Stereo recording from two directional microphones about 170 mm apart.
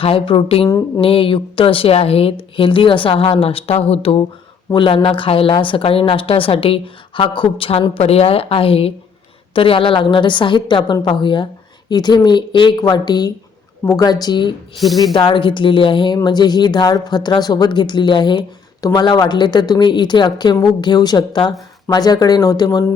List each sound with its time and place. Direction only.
0.0 s a woman's voice: 30° left (ahead or behind)
0.7 s speech: 20° left (ahead or behind)
1.0 s a woman's voice: 30° left (ahead or behind)
14.8 s speech: centre (ahead or behind)
15.1 s speech: 30° left (ahead or behind)